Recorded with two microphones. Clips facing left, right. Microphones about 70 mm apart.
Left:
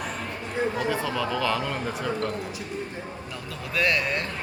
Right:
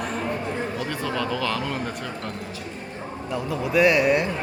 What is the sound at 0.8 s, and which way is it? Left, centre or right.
Speech, centre.